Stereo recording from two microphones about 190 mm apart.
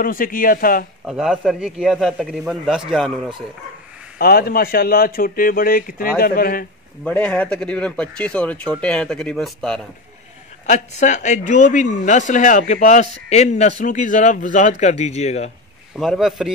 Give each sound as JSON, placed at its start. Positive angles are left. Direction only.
{"t": 0.0, "sound": "speech", "side_deg": 45}
{"t": 1.0, "sound": "speech", "side_deg": -5}
{"t": 4.2, "sound": "speech", "side_deg": 50}
{"t": 7.1, "sound": "speech", "side_deg": 5}
{"t": 10.7, "sound": "speech", "side_deg": 40}
{"t": 16.0, "sound": "speech", "side_deg": 0}